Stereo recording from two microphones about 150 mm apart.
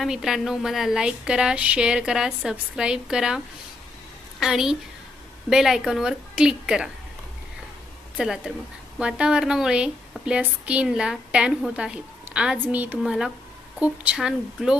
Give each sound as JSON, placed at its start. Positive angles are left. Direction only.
{"t": 0.0, "sound": "a woman's voice", "side_deg": -5}
{"t": 8.1, "sound": "a woman's voice", "side_deg": -5}